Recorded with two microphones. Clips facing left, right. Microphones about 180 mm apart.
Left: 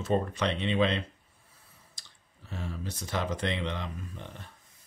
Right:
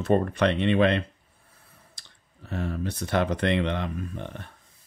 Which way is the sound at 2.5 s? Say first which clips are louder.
Right 8 dB; 60° right (ahead or behind).